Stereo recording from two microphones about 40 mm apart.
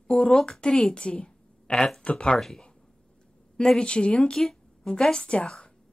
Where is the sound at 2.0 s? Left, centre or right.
Left.